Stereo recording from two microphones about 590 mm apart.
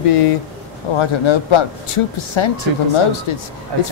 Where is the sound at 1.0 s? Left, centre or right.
Left.